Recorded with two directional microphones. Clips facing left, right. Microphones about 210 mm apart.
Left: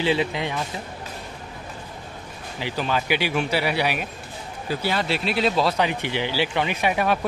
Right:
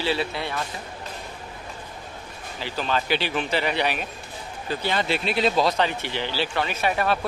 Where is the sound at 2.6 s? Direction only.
15° left (ahead or behind).